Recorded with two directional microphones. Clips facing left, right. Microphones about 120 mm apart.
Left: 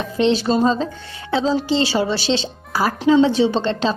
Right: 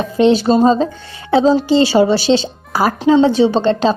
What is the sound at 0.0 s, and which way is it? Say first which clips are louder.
Speech: right 6 dB; 45° right (ahead or behind).